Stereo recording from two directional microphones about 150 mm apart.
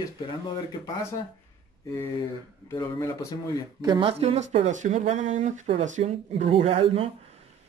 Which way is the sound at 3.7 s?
30° right (ahead or behind).